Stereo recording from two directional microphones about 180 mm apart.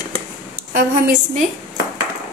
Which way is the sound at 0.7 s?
45° right (ahead or behind).